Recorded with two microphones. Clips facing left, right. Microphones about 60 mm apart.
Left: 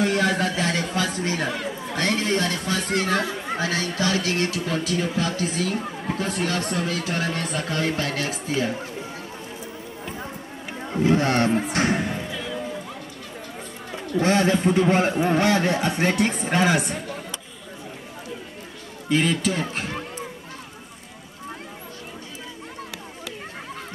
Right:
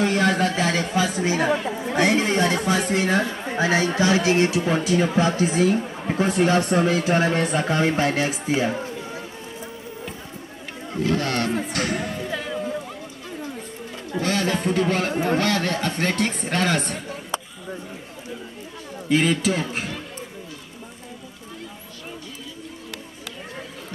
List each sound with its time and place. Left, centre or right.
0.0 s speech: centre
1.5 s speech: right
2.0 s speech: centre
10.9 s speech: left
11.7 s a sound: left
12.3 s music: right
14.2 s a man's voice: left; by 17.0 s centre
19.0 s speech: centre